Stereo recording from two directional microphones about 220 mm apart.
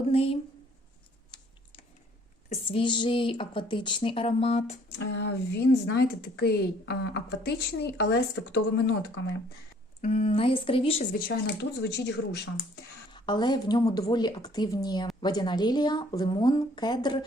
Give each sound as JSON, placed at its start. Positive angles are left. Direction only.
{"t": 0.1, "sound": "a sound", "side_deg": 25}
{"t": 2.5, "sound": "speech", "side_deg": 25}
{"t": 4.9, "sound": "speech", "side_deg": 50}
{"t": 10.0, "sound": "speech", "side_deg": 25}
{"t": 11.3, "sound": "speech", "side_deg": 50}
{"t": 13.1, "sound": "speech", "side_deg": 20}